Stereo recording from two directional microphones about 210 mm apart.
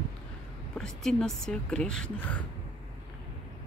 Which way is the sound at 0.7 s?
Centre (ahead or behind).